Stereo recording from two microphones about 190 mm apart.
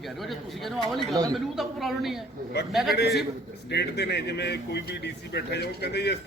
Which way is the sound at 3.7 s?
60° left (ahead or behind).